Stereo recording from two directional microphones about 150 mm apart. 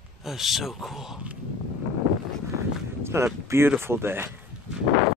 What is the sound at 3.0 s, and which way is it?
Speech, 15° right (ahead or behind).